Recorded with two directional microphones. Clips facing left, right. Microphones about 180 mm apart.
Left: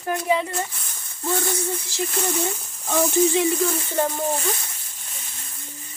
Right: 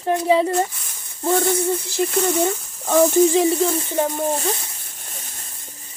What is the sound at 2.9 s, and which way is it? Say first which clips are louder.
Speech: right 5 dB; 45° right (ahead or behind).